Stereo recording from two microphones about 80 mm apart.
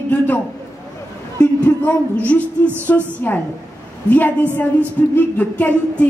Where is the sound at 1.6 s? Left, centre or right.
Centre.